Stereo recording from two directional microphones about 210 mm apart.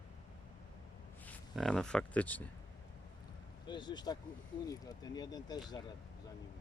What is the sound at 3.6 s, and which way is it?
Speech, 20° left (ahead or behind).